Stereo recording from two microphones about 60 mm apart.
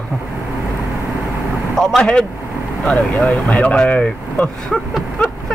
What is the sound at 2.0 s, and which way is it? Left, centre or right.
Speech, centre.